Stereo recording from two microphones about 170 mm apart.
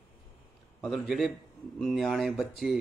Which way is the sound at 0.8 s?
Centre (ahead or behind).